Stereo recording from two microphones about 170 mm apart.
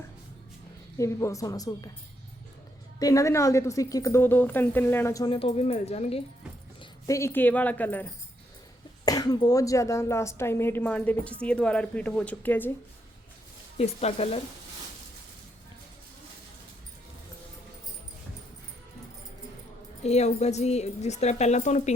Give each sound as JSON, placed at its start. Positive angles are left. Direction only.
{"t": 0.9, "sound": "a woman's voice", "side_deg": 20}
{"t": 3.0, "sound": "a woman's voice", "side_deg": 20}
{"t": 5.3, "sound": "speech", "side_deg": 35}
{"t": 7.1, "sound": "a woman's voice", "side_deg": 15}
{"t": 9.0, "sound": "a woman's voice", "side_deg": 20}
{"t": 13.7, "sound": "speech", "side_deg": 40}
{"t": 20.0, "sound": "speech", "side_deg": 40}